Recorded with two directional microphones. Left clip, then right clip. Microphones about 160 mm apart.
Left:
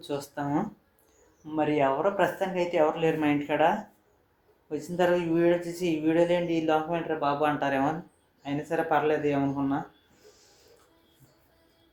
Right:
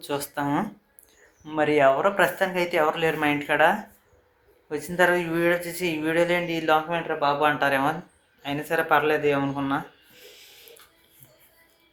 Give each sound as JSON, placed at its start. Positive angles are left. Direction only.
{"t": 0.0, "sound": "speech", "side_deg": -10}